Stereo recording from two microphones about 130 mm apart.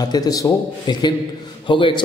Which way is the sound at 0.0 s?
30° left (ahead or behind).